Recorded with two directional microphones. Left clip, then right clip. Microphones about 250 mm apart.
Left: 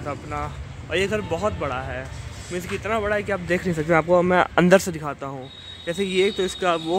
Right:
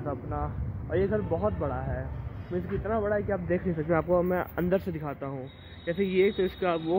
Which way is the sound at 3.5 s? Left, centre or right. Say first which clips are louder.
Left 7 dB; left.